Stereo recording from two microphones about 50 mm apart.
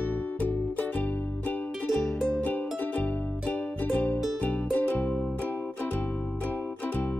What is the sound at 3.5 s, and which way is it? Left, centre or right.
Music, left.